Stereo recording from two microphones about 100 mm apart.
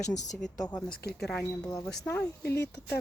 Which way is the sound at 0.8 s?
10° left (ahead or behind).